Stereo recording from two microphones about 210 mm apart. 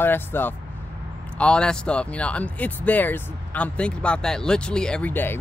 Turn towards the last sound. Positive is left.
turn(degrees=10)  # may be behind; listen again after turning